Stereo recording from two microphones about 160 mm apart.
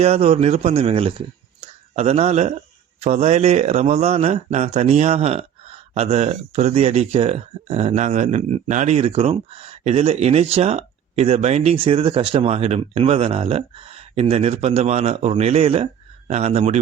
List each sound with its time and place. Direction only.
0.0 s speech: 40° right (ahead or behind)